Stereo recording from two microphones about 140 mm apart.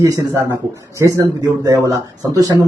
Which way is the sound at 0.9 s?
20° right (ahead or behind).